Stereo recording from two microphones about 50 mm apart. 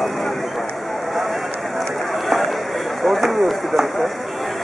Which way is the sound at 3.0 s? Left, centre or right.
Centre.